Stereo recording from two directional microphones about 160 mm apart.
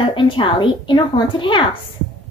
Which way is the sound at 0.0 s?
35° left (ahead or behind).